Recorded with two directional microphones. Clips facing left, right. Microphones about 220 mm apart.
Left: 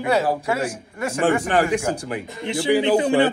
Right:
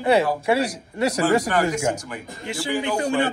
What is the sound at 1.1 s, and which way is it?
Speech, 40° right (ahead or behind).